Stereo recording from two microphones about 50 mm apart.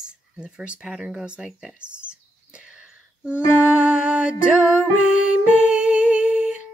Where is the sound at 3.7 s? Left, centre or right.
Right.